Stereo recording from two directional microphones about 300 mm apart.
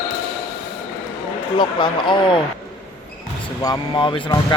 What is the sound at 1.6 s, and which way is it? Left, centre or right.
Speech, centre.